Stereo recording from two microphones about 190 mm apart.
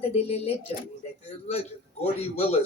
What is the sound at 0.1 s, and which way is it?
A man's voice, 30° left (ahead or behind).